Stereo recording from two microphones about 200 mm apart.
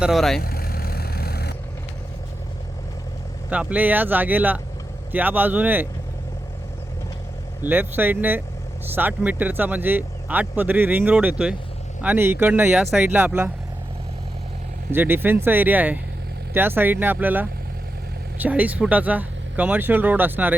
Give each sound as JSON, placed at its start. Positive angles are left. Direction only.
{"t": 0.0, "sound": "speech", "side_deg": 0}
{"t": 0.4, "sound": "vehicle", "side_deg": 50}
{"t": 3.5, "sound": "speech", "side_deg": -5}
{"t": 7.6, "sound": "speech", "side_deg": -10}
{"t": 14.9, "sound": "speech", "side_deg": -10}